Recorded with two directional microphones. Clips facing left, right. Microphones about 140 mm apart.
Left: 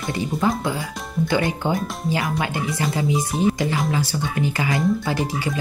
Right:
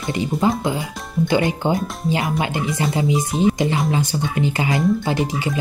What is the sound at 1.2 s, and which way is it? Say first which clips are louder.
Speech: right 3 dB; 20° right (ahead or behind).